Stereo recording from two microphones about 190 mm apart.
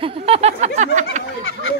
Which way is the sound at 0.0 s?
30° right (ahead or behind).